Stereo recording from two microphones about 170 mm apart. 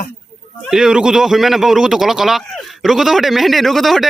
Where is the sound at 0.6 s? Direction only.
5° right (ahead or behind).